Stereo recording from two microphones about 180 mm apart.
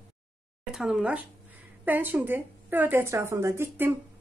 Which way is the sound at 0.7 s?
Centre (ahead or behind).